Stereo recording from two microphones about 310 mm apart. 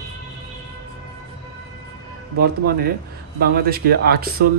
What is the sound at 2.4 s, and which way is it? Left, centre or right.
Speech, right.